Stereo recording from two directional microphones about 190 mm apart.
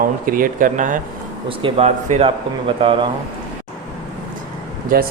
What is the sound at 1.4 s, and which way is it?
A man's voice, 30° right (ahead or behind).